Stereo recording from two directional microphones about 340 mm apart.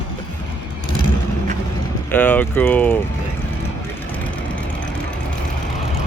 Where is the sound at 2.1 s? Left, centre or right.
Centre.